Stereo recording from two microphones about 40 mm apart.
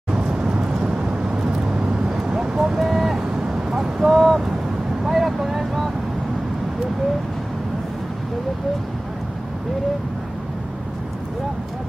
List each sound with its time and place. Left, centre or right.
0.1 s vehicle: right
2.8 s vehicle: centre
3.3 s a sound: centre
5.0 s vehicle: centre